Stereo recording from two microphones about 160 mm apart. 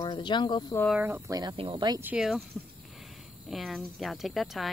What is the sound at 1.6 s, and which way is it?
Speech, 30° right (ahead or behind).